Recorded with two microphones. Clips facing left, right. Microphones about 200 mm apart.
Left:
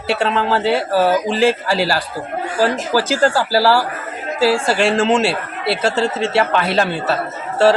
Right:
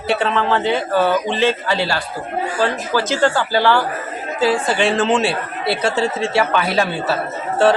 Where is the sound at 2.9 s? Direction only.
35° left (ahead or behind).